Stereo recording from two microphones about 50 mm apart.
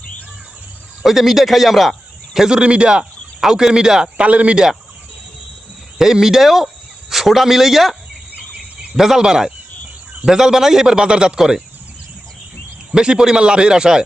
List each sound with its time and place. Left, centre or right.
1.0 s speech: centre
4.3 s speech: right
6.0 s speech: centre
9.0 s speech: centre
12.9 s speech: centre